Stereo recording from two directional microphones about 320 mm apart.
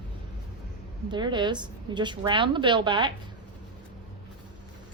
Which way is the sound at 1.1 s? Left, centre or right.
Centre.